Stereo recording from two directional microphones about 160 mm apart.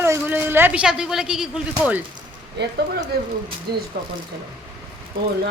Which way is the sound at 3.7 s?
90° right.